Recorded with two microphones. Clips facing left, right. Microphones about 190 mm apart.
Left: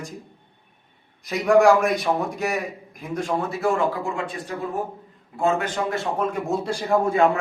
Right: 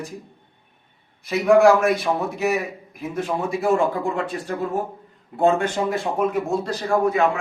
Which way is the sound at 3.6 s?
25° right (ahead or behind).